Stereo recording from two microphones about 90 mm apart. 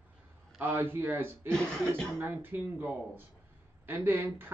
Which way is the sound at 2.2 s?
25° right (ahead or behind).